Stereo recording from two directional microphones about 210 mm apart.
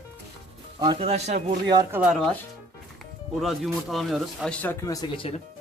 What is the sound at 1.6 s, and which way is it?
Speech, 20° right (ahead or behind).